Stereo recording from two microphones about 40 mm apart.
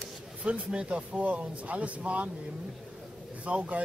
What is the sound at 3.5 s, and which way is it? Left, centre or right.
Speech, right.